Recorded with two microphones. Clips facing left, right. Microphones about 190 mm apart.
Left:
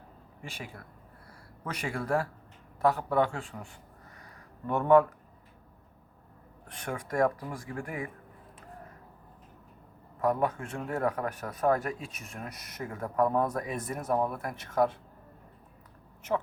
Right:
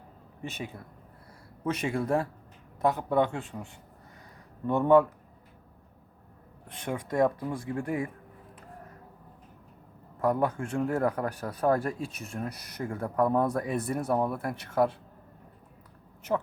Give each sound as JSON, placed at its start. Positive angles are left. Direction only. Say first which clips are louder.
{"t": 0.4, "sound": "speech", "louder": "right 5 dB", "side_deg": -20}
{"t": 6.7, "sound": "speech", "louder": "right 2 dB", "side_deg": -25}
{"t": 10.2, "sound": "speech", "louder": "right 1 dB", "side_deg": -30}